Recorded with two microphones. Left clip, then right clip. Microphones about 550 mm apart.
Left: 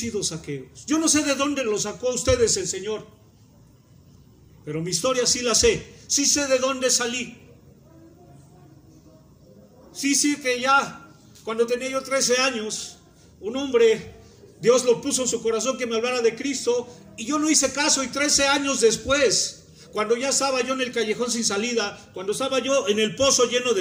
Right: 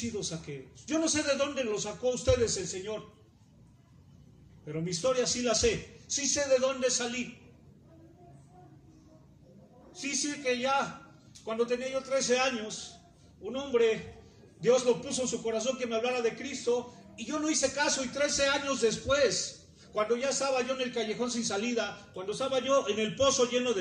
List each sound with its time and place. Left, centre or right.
0.2 s a man's voice: centre
4.6 s a man's voice: centre
9.9 s a man's voice: centre